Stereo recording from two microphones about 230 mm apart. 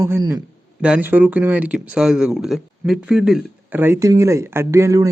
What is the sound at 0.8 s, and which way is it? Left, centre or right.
Speech, centre.